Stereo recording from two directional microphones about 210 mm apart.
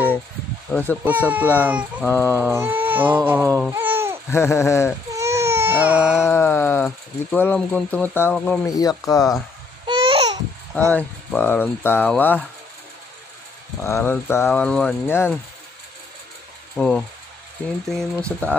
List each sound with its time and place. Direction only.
0.7 s speech: 10° left (ahead or behind)
1.0 s speech: 10° right (ahead or behind)
4.3 s speech: 10° left (ahead or behind)
5.1 s baby cry: 15° right (ahead or behind)
6.2 s speech: 10° left (ahead or behind)
9.8 s babbling: 25° right (ahead or behind)
10.9 s speech: 10° left (ahead or behind)
13.8 s speech: 10° left (ahead or behind)
16.7 s speech: 5° left (ahead or behind)
18.1 s speech: 5° left (ahead or behind)